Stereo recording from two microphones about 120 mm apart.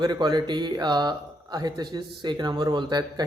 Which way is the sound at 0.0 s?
35° right (ahead or behind).